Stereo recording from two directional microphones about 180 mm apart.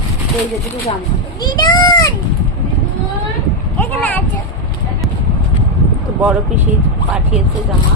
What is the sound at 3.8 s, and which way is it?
Speech, 10° left (ahead or behind).